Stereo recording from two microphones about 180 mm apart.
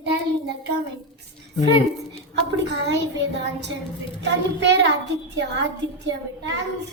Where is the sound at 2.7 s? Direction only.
70° right (ahead or behind).